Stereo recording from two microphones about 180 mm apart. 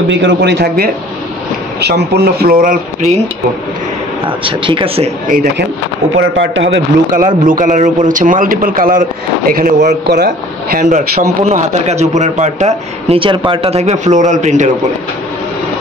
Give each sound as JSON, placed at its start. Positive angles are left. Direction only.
{"t": 0.1, "sound": "a man's voice", "side_deg": -80}
{"t": 4.5, "sound": "speech", "side_deg": -30}
{"t": 5.3, "sound": "a man's voice", "side_deg": -55}
{"t": 6.1, "sound": "speech", "side_deg": -90}
{"t": 7.2, "sound": "a man's voice", "side_deg": -45}
{"t": 11.4, "sound": "speech", "side_deg": -40}